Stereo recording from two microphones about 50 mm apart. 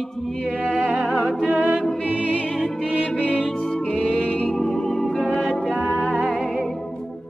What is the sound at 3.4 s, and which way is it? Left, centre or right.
Music, centre.